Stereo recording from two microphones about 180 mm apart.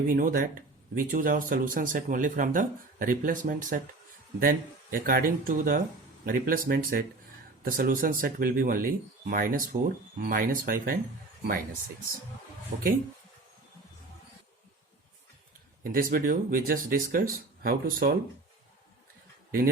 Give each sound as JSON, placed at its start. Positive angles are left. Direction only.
{"t": 0.1, "sound": "speech", "side_deg": -50}
{"t": 12.7, "sound": "speech", "side_deg": -45}
{"t": 15.8, "sound": "speech", "side_deg": -50}
{"t": 19.5, "sound": "speech", "side_deg": -55}